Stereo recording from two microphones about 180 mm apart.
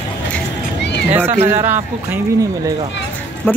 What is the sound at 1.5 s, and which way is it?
Speech, 10° right (ahead or behind).